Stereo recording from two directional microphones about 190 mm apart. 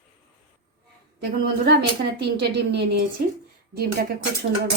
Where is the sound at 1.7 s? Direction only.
60° right (ahead or behind).